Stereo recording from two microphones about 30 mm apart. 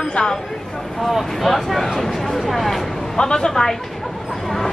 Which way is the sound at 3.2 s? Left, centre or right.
Left.